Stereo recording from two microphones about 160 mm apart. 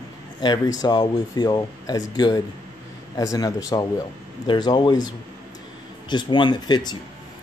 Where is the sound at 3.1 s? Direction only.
20° left (ahead or behind).